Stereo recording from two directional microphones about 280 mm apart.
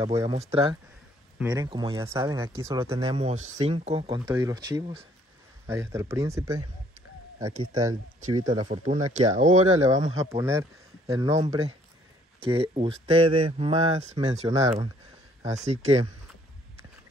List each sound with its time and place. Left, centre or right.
0.0 s speech: centre
3.0 s speech: right
10.1 s speech: centre
15.5 s speech: right